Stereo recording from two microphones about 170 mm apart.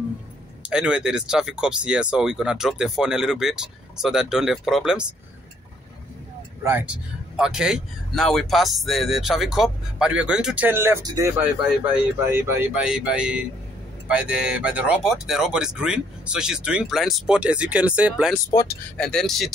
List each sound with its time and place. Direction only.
0.6 s speech: 5° right (ahead or behind)
6.6 s speech: 10° right (ahead or behind)
18.5 s speech: 20° left (ahead or behind)
18.9 s speech: 5° left (ahead or behind)